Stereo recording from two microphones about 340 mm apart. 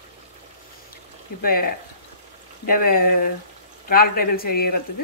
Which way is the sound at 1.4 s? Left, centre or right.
Left.